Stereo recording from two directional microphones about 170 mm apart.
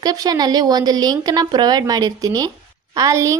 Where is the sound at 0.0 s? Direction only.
25° right (ahead or behind).